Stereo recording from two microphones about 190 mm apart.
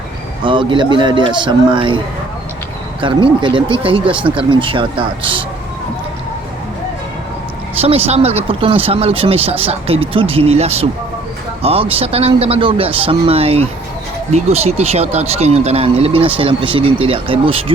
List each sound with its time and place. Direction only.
0.4 s speech: 25° right (ahead or behind)
3.0 s speech: 25° right (ahead or behind)
7.8 s speech: 30° right (ahead or behind)